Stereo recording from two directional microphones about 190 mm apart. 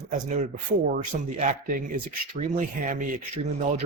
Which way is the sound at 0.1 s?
40° right (ahead or behind).